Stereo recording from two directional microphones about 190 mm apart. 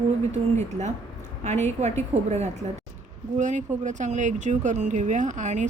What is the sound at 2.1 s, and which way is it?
Speech, 35° right (ahead or behind).